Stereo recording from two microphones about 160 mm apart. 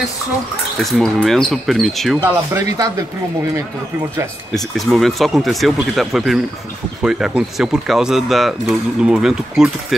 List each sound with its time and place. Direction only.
0.7 s speech: centre (ahead or behind)
2.1 s speech: 15° right (ahead or behind)
4.6 s speech: centre (ahead or behind)